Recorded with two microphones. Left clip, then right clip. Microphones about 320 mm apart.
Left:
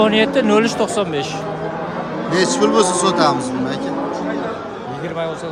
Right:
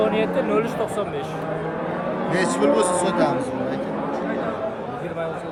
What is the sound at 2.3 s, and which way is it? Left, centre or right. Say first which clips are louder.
A man's voice: left 5 dB; centre.